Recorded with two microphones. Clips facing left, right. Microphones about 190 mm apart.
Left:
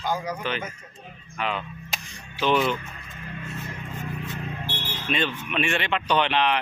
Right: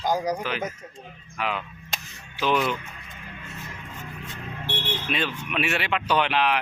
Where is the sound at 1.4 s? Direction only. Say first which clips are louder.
Even; 5° right (ahead or behind).